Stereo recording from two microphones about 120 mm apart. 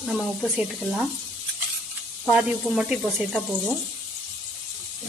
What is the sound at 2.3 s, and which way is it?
Speech, 5° right (ahead or behind).